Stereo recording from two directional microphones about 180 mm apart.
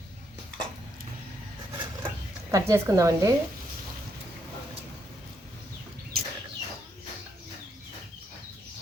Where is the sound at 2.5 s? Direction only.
15° right (ahead or behind).